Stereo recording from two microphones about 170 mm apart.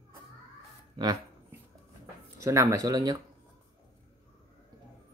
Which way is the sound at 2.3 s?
20° right (ahead or behind).